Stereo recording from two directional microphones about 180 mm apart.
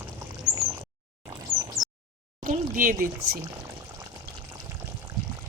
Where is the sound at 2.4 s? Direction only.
50° right (ahead or behind).